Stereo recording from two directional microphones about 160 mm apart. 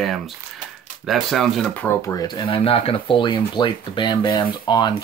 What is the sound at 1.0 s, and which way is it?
Speech, centre (ahead or behind).